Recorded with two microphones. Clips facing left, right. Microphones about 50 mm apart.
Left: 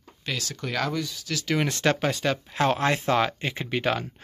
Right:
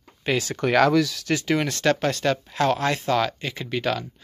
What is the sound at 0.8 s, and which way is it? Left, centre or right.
Speech, right.